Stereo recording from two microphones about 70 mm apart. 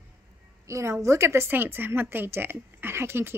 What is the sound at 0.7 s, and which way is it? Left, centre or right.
A woman's voice, right.